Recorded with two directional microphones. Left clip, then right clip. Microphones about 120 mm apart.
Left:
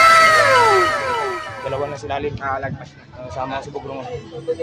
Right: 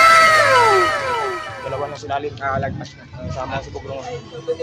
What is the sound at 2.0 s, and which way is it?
Speech, 20° left (ahead or behind).